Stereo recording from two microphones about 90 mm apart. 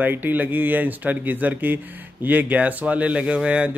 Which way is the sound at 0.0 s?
20° right (ahead or behind).